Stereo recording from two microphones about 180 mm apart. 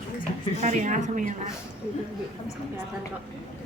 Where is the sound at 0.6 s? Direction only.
40° right (ahead or behind).